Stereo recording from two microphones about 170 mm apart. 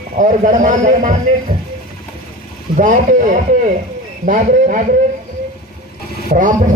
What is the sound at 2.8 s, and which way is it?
A man's voice, 50° right (ahead or behind).